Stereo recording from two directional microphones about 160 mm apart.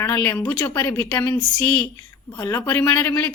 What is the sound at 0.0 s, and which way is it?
A woman's voice, 15° left (ahead or behind).